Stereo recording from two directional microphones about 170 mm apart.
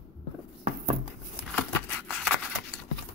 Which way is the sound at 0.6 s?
40° right (ahead or behind).